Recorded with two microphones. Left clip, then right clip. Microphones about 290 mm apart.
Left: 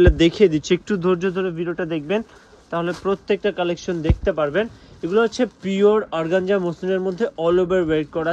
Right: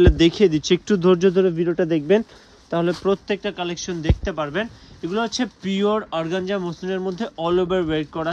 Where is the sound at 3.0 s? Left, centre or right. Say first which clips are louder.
Left 1 dB; centre.